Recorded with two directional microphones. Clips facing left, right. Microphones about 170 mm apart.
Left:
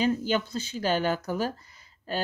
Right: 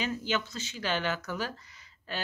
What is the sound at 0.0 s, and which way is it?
Speech, 40° left (ahead or behind).